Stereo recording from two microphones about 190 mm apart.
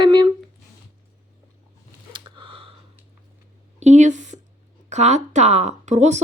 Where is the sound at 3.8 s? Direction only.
40° right (ahead or behind).